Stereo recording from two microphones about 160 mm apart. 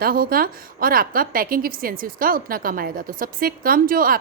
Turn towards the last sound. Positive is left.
turn(degrees=-60)  # may be behind; listen again after turning